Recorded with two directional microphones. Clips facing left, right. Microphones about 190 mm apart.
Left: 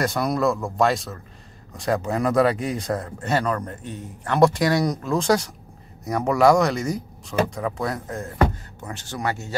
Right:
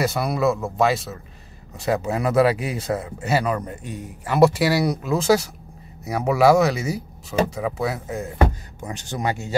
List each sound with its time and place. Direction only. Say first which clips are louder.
0.0 s speech: right 1 dB; 5° right (ahead or behind)
8.8 s speech: right 2 dB; 15° right (ahead or behind)